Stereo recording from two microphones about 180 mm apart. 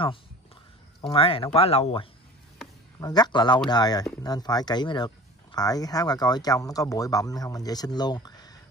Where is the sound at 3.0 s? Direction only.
20° left (ahead or behind).